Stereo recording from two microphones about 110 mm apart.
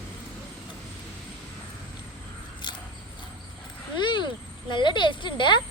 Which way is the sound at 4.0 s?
45° left (ahead or behind).